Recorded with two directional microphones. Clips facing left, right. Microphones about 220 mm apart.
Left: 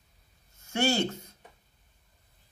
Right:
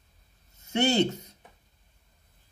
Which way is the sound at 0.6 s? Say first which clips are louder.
Right 3 dB; 20° right (ahead or behind).